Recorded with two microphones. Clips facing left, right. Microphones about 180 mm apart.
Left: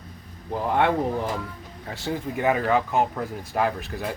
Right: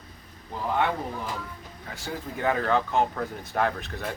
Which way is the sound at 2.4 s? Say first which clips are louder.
Left 2 dB; 10° left (ahead or behind).